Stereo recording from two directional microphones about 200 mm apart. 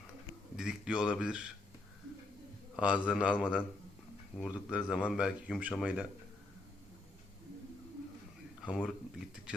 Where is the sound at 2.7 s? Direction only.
5° right (ahead or behind).